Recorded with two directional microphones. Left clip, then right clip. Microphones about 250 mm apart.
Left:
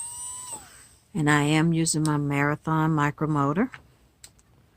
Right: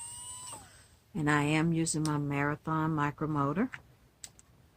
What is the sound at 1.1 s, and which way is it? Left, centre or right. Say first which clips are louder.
Speech: left 7 dB; left.